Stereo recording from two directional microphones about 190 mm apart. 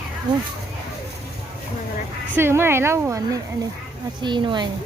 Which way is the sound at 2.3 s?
10° right (ahead or behind).